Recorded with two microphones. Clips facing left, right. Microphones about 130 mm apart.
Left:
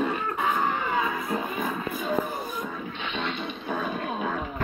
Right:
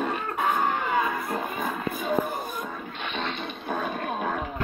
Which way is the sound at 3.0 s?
45° right (ahead or behind).